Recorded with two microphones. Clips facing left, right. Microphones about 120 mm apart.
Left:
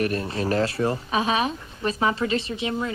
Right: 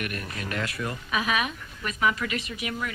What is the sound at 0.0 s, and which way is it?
Speech, 30° left (ahead or behind).